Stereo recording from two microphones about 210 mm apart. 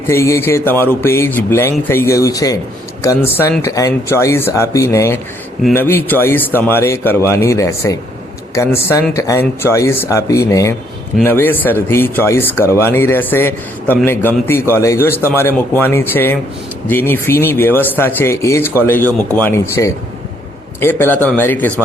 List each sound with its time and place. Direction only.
0.1 s speech: 10° left (ahead or behind)